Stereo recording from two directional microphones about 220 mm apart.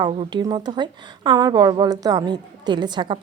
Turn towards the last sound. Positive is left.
turn(degrees=-20)  # may be behind; listen again after turning